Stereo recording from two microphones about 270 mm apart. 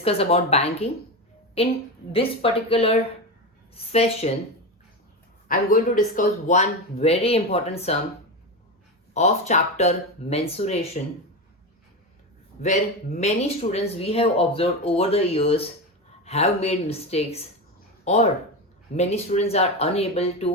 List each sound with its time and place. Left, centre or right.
0.0 s speech: left
2.1 s speech: left
5.5 s speech: left
9.1 s speech: left
12.6 s speech: left